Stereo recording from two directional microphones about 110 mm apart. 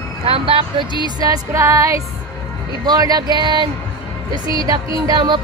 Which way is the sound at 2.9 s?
35° right (ahead or behind).